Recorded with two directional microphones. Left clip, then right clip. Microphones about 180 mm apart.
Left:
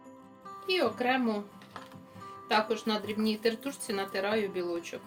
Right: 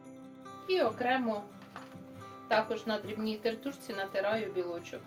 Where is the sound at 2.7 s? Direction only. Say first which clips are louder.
Left 3 dB; 90° left.